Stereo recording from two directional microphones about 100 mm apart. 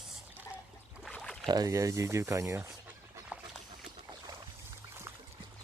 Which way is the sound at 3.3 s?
15° right (ahead or behind).